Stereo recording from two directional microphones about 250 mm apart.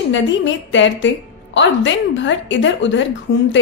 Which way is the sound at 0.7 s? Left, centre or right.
Left.